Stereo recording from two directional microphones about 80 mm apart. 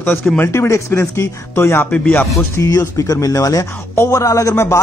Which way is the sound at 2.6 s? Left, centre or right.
Left.